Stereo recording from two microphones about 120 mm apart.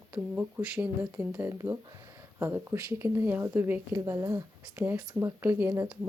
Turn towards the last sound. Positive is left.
turn(degrees=-20)  # may be behind; listen again after turning